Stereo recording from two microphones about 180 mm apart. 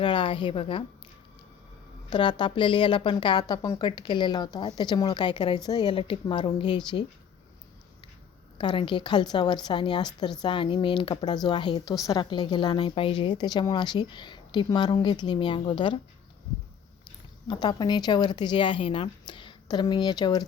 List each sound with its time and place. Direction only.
0.0 s a woman's voice: 25° left (ahead or behind)
2.0 s a woman's voice: 25° left (ahead or behind)
8.5 s a woman's voice: 25° left (ahead or behind)
17.5 s a woman's voice: 25° left (ahead or behind)